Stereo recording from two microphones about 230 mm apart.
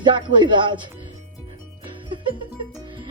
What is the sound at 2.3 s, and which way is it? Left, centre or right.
Music, right.